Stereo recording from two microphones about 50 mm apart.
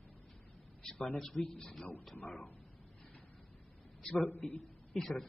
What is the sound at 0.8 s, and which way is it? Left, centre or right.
A man's voice, centre.